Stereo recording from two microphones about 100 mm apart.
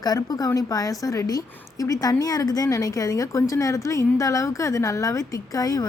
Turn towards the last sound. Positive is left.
turn(degrees=35)  # may be behind; listen again after turning